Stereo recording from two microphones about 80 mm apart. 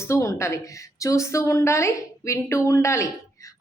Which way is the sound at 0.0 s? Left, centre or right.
Left.